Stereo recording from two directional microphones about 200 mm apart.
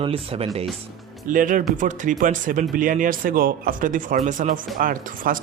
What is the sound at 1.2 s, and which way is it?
Speech, 40° right (ahead or behind).